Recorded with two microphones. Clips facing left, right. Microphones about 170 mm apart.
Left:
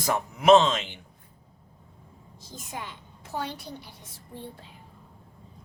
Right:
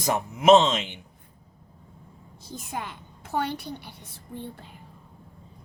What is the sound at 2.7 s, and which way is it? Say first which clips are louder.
A woman's voice: right 3 dB; 55° right (ahead or behind).